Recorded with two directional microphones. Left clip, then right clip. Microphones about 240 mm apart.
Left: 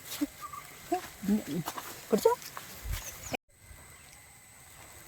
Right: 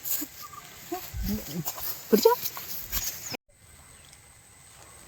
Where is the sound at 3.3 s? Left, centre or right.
Centre.